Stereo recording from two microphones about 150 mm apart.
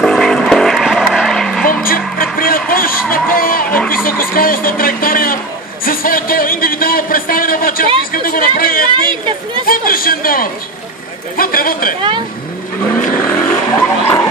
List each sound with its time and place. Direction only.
0.0 s vehicle: 5° left (ahead or behind)
1.7 s music: 70° left (ahead or behind)
2.3 s a sound: 75° left (ahead or behind)
8.1 s chatter: 70° left (ahead or behind)
9.7 s a man's voice: 75° left (ahead or behind)
13.2 s vehicle: 15° left (ahead or behind)